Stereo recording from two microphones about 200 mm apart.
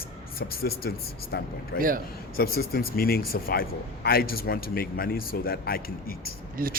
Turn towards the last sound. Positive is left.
turn(degrees=-45)  # may be behind; listen again after turning